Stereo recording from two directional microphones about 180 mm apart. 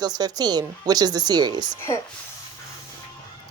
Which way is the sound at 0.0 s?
20° right (ahead or behind).